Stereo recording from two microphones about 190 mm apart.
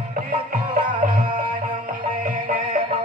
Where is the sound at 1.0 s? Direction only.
45° right (ahead or behind).